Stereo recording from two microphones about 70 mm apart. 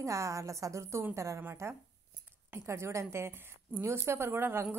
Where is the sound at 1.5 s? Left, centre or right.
Right.